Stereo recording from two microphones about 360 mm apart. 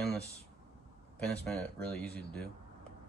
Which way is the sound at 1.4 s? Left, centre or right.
Centre.